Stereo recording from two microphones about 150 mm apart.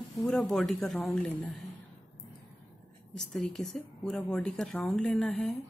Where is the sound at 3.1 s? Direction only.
5° left (ahead or behind).